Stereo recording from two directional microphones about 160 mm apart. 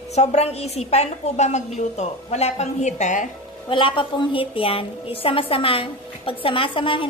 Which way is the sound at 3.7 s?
30° left (ahead or behind).